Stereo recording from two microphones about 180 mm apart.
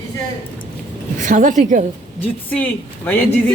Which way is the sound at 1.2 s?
45° right (ahead or behind).